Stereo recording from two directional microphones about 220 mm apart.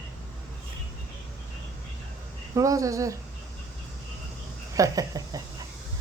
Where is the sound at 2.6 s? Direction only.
15° right (ahead or behind).